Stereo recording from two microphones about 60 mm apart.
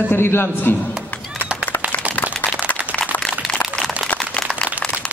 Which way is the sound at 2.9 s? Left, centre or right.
Centre.